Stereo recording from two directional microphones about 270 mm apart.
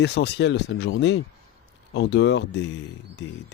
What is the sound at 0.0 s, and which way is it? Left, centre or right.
Speech, left.